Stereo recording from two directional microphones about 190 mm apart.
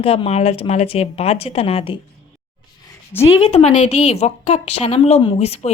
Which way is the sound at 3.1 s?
10° left (ahead or behind).